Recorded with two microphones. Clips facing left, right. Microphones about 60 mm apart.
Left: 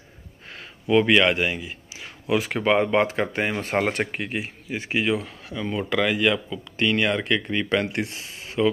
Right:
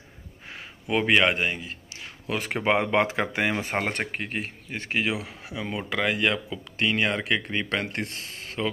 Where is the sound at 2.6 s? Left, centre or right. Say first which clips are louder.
Left 1 dB; right.